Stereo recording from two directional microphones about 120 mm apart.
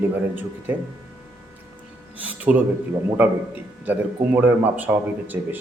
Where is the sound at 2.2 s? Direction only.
15° right (ahead or behind).